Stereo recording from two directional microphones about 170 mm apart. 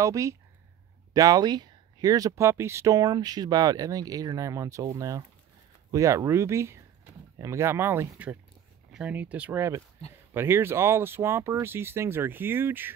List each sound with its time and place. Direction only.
0.0 s speech: 20° right (ahead or behind)